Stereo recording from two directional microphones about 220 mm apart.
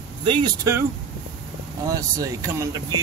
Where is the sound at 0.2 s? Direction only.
20° right (ahead or behind).